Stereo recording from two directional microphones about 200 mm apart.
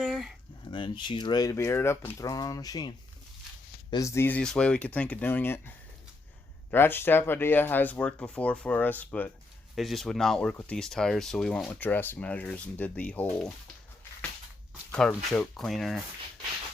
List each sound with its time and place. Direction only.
0.0 s a sound: centre (ahead or behind)
0.7 s speech: 25° left (ahead or behind)
3.9 s speech: 15° left (ahead or behind)
14.9 s speech: 5° left (ahead or behind)